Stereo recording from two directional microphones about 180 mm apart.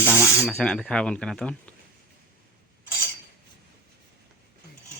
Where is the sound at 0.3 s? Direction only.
5° left (ahead or behind).